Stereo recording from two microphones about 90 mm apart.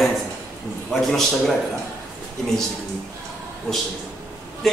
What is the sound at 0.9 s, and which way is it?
Speech, 5° left (ahead or behind).